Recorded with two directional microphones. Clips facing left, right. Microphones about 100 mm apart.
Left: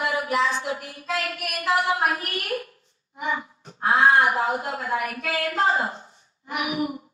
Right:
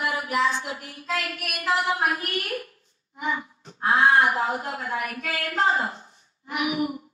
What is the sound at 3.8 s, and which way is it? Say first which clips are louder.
Child singing: left 1 dB; 30° left (ahead or behind).